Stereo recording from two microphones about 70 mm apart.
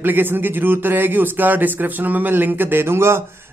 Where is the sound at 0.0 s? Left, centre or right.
Right.